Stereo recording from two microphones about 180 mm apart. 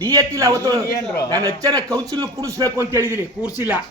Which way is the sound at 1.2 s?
20° right (ahead or behind).